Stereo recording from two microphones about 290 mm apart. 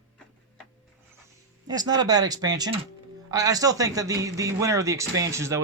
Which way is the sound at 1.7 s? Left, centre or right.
Centre.